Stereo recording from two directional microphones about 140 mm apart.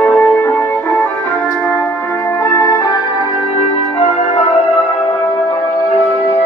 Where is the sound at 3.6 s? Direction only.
55° left (ahead or behind).